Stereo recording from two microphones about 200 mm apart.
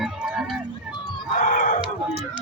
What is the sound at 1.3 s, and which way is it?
Chicken, 40° left (ahead or behind).